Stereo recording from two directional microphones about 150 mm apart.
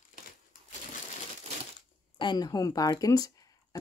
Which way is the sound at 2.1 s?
30° left (ahead or behind).